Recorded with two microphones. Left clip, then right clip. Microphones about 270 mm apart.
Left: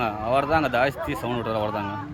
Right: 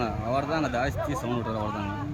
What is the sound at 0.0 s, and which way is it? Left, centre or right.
Speech, centre.